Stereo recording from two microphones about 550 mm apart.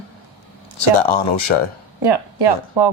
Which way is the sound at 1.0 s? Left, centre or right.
Left.